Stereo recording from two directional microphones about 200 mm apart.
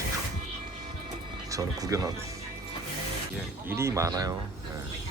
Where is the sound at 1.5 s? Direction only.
15° right (ahead or behind).